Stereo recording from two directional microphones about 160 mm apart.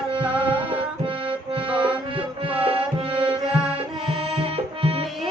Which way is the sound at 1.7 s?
30° right (ahead or behind).